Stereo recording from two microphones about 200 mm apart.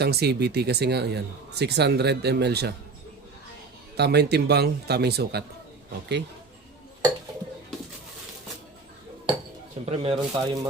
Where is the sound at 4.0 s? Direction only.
55° right (ahead or behind).